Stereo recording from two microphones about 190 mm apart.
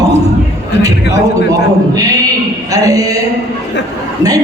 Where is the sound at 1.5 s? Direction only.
20° right (ahead or behind).